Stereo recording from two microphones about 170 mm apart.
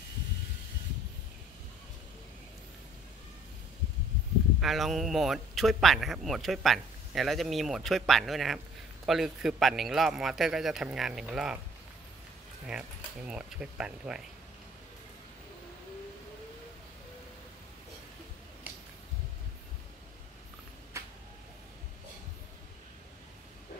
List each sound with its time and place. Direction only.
4.6 s a man's voice: centre (ahead or behind)
12.6 s a man's voice: 5° right (ahead or behind)
20.9 s a sound: 15° right (ahead or behind)